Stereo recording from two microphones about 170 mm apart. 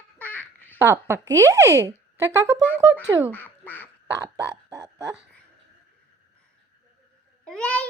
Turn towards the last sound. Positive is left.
turn(degrees=5)  # may be behind; listen again after turning